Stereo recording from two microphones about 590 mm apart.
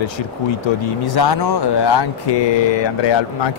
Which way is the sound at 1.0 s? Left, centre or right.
Left.